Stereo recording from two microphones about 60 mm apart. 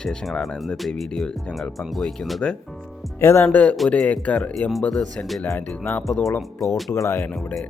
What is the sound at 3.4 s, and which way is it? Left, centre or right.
Speech, left.